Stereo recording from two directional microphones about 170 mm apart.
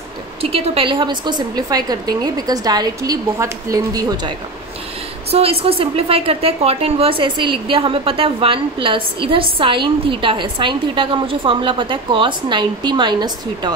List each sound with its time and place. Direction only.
0.4 s a woman's voice: 35° right (ahead or behind)
5.3 s a woman's voice: 35° right (ahead or behind)